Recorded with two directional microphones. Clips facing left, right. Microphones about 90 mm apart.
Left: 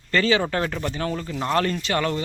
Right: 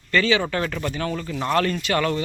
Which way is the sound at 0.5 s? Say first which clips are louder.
Even; 25° left (ahead or behind).